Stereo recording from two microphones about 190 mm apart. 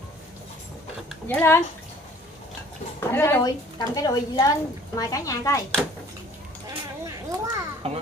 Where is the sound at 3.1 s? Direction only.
15° left (ahead or behind).